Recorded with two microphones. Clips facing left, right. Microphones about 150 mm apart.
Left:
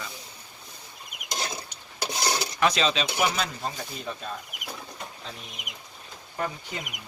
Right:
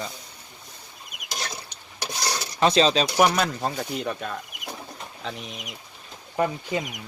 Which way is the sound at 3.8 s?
85° right.